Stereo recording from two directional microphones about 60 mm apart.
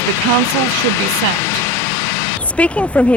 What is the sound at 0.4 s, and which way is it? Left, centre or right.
Speech, left.